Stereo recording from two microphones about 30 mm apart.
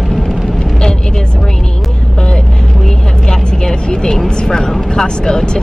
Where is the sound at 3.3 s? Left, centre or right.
Left.